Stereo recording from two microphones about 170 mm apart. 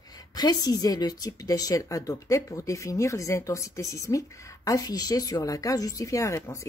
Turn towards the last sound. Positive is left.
turn(degrees=20)  # may be behind; listen again after turning